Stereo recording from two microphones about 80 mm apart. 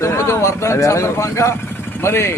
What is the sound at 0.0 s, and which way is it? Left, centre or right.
Speech, left.